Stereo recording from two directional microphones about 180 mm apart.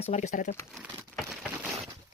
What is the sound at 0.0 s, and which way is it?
Speech, 40° left (ahead or behind).